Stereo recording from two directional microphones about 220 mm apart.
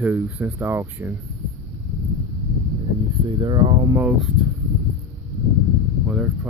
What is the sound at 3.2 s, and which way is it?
Speech, 20° right (ahead or behind).